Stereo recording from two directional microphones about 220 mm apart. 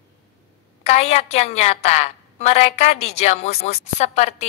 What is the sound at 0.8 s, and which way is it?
A woman's voice, 30° left (ahead or behind).